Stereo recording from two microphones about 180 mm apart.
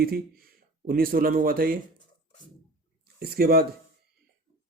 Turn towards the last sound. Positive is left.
turn(degrees=-60)  # may be behind; listen again after turning